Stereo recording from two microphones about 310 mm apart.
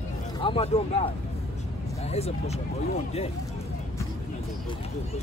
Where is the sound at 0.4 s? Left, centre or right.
Centre.